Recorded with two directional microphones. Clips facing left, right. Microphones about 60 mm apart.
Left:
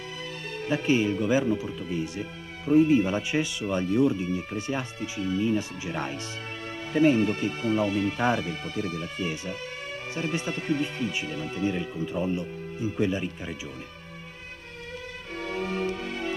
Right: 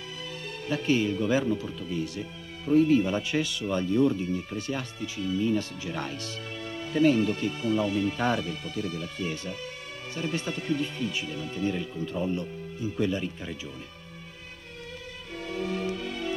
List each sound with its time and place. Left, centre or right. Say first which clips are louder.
0.7 s speech: left 2 dB; left
8.2 s speech: left 3 dB; centre
8.7 s speech: left 2 dB; left
10.1 s speech: left 1 dB; left
11.2 s speech: left 2 dB; left
11.6 s speech: left 1 dB; centre
15.3 s music: left 1 dB; left